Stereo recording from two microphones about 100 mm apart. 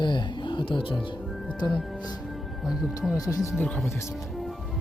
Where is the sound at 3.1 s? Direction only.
35° left (ahead or behind).